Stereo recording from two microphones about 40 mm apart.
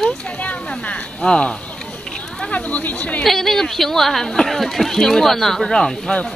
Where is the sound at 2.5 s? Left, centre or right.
Left.